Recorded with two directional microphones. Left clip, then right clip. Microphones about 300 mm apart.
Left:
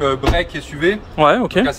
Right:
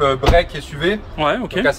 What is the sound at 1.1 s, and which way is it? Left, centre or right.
Speech, centre.